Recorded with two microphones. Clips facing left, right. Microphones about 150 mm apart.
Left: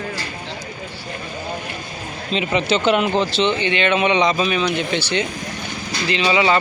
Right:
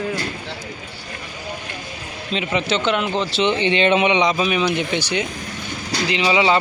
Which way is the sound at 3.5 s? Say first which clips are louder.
Right 2 dB; 30° right (ahead or behind).